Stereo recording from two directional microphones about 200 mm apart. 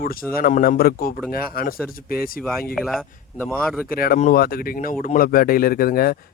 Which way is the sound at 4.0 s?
40° left (ahead or behind).